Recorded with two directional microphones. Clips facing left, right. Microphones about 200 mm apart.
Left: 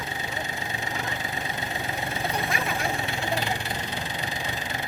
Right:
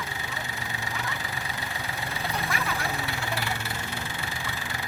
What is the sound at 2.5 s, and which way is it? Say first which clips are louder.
Vehicle: left 2 dB; 15° left (ahead or behind).